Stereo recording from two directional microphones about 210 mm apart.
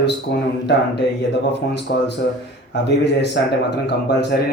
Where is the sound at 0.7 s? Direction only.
55° left (ahead or behind).